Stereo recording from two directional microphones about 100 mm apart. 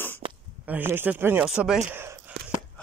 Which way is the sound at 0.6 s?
20° right (ahead or behind).